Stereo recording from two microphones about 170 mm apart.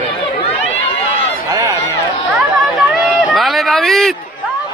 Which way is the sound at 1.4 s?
20° right (ahead or behind).